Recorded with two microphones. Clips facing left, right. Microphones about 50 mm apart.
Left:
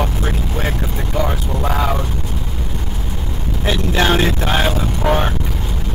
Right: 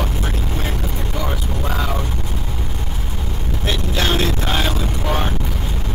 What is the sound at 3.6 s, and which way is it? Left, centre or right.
Vehicle, left.